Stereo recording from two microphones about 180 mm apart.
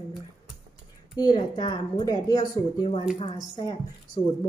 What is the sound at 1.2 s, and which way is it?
A woman's voice, 25° left (ahead or behind).